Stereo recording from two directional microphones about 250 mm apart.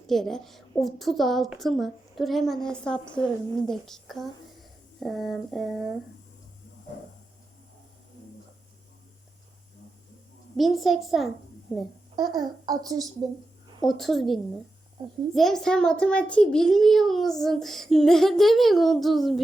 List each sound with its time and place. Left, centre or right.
0.1 s a child's voice: centre
10.6 s a child's voice: centre
12.1 s a child's voice: centre
13.8 s a child's voice: centre